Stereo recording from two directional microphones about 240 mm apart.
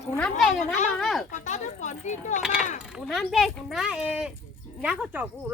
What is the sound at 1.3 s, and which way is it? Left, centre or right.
Speech, left.